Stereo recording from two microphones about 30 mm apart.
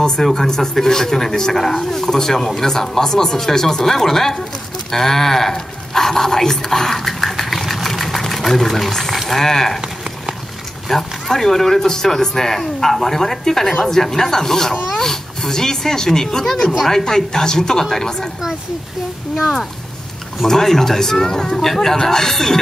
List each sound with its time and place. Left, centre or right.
0.2 s speech: centre
7.1 s sewing machine: centre
8.9 s speech: centre
9.8 s a sound: right
10.9 s speech: centre
20.4 s speech: centre